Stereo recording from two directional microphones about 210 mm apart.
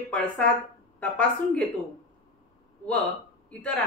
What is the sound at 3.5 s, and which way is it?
Speech, 5° left (ahead or behind).